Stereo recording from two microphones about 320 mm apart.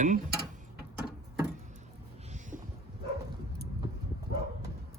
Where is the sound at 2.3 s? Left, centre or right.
Right.